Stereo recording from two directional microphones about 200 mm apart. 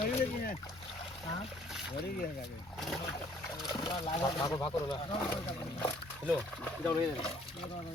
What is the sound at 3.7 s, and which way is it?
Speech, 25° left (ahead or behind).